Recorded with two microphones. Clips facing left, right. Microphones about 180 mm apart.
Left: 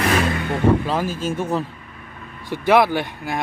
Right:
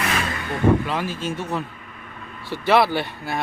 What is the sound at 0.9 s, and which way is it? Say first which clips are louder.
Speech: left 3 dB; 45° left (ahead or behind).